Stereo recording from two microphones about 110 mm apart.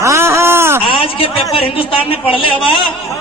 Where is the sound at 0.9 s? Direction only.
55° left (ahead or behind).